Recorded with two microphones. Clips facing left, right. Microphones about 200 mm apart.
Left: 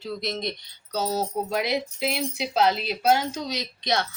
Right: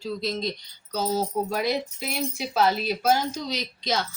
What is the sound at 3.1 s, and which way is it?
Speech, 65° left (ahead or behind).